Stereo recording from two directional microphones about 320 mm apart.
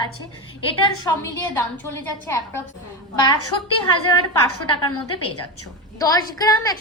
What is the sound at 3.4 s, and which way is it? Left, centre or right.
A woman's voice, left.